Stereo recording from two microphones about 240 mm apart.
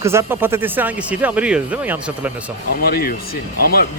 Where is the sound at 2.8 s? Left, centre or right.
Left.